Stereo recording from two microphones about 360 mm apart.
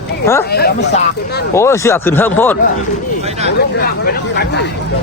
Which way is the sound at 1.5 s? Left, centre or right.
Centre.